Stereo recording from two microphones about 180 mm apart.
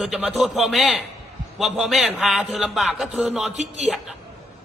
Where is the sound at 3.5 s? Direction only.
40° right (ahead or behind).